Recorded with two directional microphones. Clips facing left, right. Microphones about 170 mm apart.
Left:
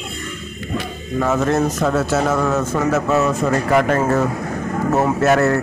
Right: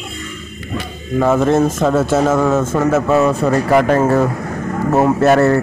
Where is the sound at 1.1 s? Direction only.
25° right (ahead or behind).